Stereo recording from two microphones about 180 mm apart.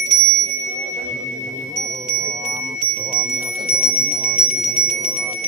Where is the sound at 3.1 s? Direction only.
Centre (ahead or behind).